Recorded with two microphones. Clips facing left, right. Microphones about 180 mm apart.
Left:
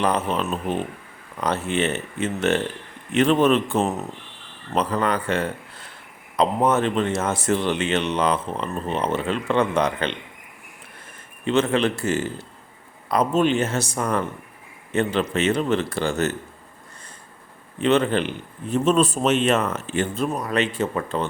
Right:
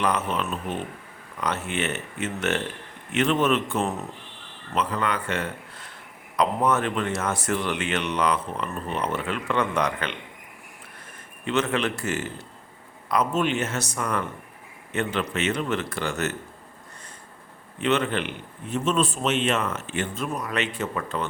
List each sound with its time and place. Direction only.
0.0 s a man's voice: 30° left (ahead or behind)
11.4 s a man's voice: 30° left (ahead or behind)
17.7 s a man's voice: 30° left (ahead or behind)